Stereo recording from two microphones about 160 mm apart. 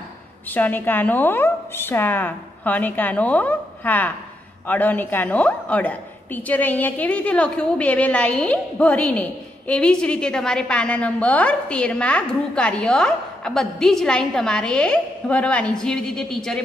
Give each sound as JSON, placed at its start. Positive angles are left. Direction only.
{"t": 0.5, "sound": "a woman's voice", "side_deg": 10}